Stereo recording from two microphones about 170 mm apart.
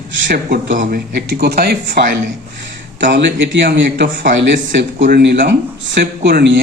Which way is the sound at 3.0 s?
90° right.